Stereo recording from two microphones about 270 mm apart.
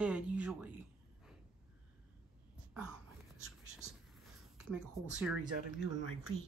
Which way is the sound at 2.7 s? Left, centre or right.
Centre.